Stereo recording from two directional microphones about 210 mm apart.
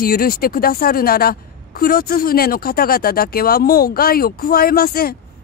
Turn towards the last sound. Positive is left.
turn(degrees=45)  # may be behind; listen again after turning